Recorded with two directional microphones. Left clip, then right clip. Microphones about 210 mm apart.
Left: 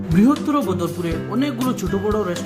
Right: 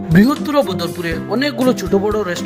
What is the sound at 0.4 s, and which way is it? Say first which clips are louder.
Speech: right 4 dB; 25° right (ahead or behind).